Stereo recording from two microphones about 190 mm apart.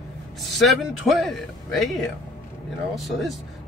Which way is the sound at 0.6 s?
Centre (ahead or behind).